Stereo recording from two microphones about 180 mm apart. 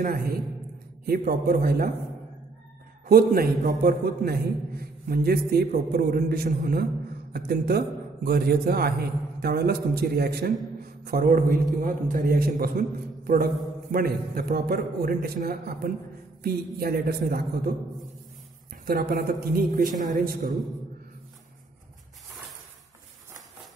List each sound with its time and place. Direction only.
0.0 s a man's voice: 55° right (ahead or behind)
3.1 s a man's voice: 55° right (ahead or behind)
18.9 s a man's voice: 50° right (ahead or behind)